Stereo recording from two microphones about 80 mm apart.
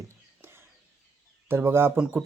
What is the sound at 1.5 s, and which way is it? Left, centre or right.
Speech, right.